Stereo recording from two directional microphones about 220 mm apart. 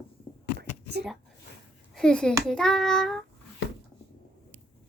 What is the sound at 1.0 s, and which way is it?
Speech, 45° right (ahead or behind).